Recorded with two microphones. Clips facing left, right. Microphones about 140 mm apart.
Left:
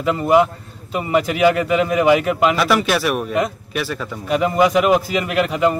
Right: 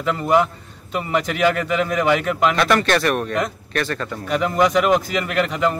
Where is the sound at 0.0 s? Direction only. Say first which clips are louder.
Left 3 dB; 5° left (ahead or behind).